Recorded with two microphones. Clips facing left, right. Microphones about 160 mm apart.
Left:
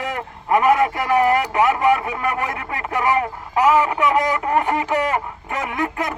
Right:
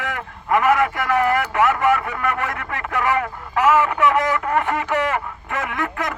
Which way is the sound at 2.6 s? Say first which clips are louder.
Left 1 dB; 30° left (ahead or behind).